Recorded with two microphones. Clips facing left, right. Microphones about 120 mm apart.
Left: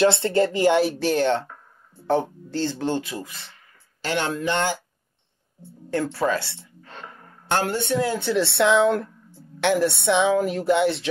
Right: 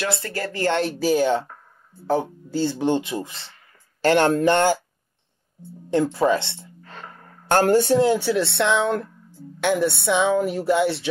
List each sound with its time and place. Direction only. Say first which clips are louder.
0.0 s speech: left 8 dB; 25° left (ahead or behind); by 0.9 s 10° left (ahead or behind)
0.9 s speech: right 2 dB; 5° right (ahead or behind); by 3.5 s 30° right (ahead or behind)
4.0 s speech: right 8 dB; 50° right (ahead or behind)
6.1 s a woman's voice: right 4 dB; 20° right (ahead or behind); by 8.1 s 35° right (ahead or behind)
8.2 s speech: even; centre (ahead or behind)